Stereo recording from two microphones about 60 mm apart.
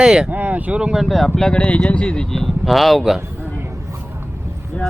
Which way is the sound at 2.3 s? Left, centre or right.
Centre.